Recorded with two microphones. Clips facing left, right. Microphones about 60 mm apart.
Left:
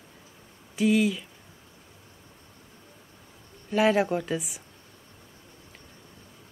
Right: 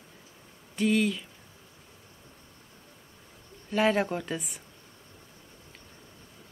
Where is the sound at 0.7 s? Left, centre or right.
Centre.